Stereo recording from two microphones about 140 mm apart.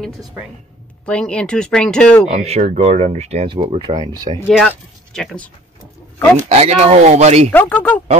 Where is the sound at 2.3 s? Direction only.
50° right (ahead or behind).